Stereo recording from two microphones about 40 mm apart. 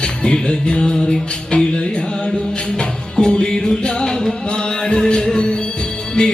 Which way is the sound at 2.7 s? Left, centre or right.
Left.